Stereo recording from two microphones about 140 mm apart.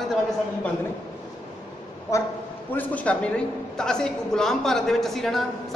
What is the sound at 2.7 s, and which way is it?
A woman's voice, 10° left (ahead or behind).